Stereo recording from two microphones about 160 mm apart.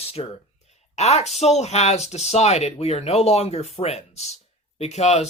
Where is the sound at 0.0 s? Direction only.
40° left (ahead or behind).